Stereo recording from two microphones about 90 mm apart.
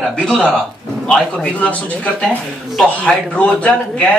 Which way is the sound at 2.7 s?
5° left (ahead or behind).